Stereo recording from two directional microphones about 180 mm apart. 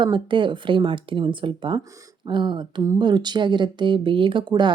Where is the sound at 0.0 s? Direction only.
25° right (ahead or behind).